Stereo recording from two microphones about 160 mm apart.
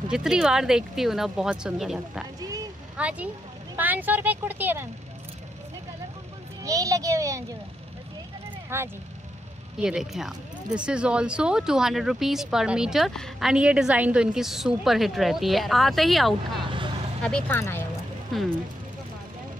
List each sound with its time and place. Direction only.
0.1 s speech: 5° right (ahead or behind)
6.6 s a child's voice: 20° right (ahead or behind)
8.6 s speech: 15° right (ahead or behind)
9.8 s speech: 5° right (ahead or behind)
16.6 s vehicle: 30° right (ahead or behind)
17.2 s speech: 5° left (ahead or behind)
18.3 s speech: centre (ahead or behind)